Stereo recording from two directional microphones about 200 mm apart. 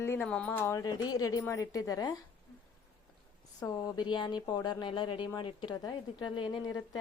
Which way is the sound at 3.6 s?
20° left (ahead or behind).